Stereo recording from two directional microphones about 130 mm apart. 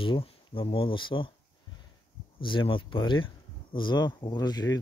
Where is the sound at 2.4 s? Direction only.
40° left (ahead or behind).